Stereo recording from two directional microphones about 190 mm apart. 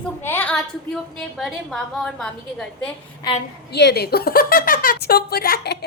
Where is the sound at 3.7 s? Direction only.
60° left (ahead or behind).